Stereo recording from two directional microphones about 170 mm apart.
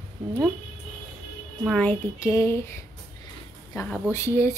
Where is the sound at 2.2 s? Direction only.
15° left (ahead or behind).